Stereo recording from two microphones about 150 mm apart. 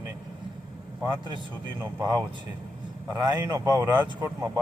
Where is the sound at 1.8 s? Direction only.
20° right (ahead or behind).